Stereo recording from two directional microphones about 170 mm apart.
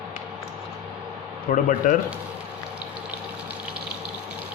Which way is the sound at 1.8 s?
50° left (ahead or behind).